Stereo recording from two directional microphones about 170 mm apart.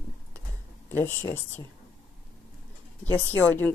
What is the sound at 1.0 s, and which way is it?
Speech, 15° left (ahead or behind).